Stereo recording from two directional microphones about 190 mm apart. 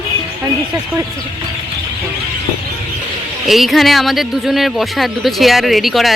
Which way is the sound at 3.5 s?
Centre (ahead or behind).